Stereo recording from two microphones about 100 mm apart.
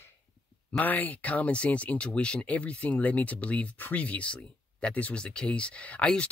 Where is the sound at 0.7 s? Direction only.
15° left (ahead or behind).